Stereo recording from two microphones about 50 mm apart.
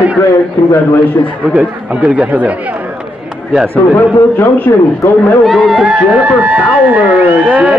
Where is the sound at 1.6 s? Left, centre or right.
Right.